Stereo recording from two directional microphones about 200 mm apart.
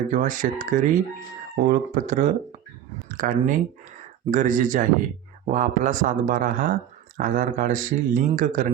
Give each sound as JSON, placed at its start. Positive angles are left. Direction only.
{"t": 0.1, "sound": "speech", "side_deg": -40}